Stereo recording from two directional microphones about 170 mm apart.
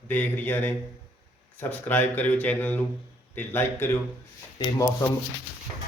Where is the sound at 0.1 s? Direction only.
10° left (ahead or behind).